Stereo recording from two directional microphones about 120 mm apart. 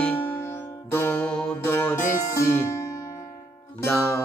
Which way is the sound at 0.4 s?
20° left (ahead or behind).